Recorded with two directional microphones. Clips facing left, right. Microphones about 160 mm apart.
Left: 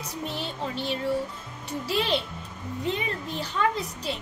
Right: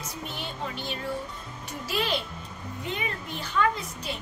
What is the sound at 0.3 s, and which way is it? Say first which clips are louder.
A child's voice: left 3 dB; 30° left (ahead or behind).